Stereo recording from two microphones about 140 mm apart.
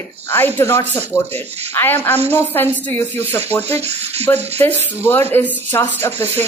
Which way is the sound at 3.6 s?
50° right (ahead or behind).